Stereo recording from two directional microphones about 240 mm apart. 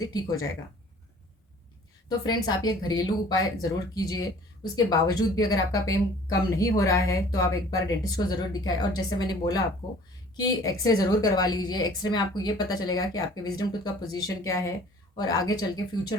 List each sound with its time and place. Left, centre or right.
0.0 s speech: centre
2.0 s speech: centre